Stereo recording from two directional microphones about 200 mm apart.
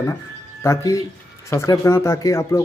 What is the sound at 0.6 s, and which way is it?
Speech, 15° left (ahead or behind).